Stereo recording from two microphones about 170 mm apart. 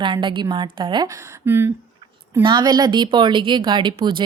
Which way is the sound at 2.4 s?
25° right (ahead or behind).